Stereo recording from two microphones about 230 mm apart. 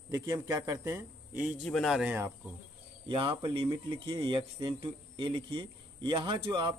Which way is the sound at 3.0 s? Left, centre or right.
Right.